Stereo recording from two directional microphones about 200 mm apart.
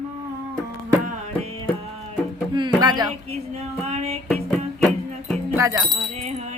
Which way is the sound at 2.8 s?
20° right (ahead or behind).